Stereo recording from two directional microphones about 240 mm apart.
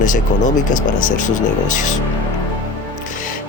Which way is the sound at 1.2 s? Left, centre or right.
Left.